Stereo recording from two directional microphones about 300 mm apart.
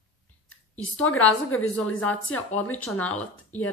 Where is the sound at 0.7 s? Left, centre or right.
Centre.